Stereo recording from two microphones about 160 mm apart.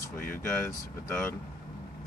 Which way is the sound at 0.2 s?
60° left (ahead or behind).